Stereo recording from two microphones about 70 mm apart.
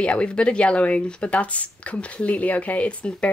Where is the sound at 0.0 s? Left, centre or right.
Centre.